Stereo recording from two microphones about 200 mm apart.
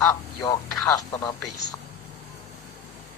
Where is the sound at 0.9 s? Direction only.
20° left (ahead or behind).